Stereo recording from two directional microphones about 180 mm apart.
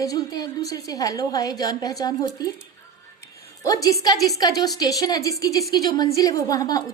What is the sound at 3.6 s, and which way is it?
A woman's voice, 20° left (ahead or behind).